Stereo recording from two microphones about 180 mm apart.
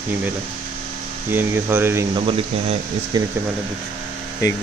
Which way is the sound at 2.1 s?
30° right (ahead or behind).